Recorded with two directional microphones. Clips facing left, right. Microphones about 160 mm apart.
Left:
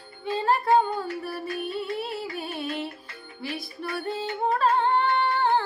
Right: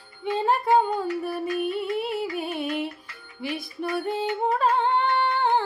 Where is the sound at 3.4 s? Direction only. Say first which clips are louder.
Right 4 dB; 20° right (ahead or behind).